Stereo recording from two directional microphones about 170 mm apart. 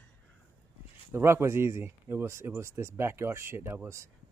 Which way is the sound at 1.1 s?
15° right (ahead or behind).